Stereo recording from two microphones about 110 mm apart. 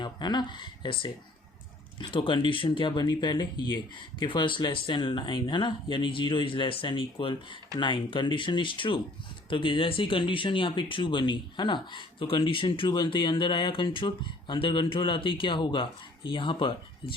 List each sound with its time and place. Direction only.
0.0 s speech: 40° left (ahead or behind)